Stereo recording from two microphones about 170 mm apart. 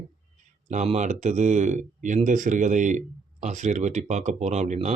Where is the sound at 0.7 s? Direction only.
45° right (ahead or behind).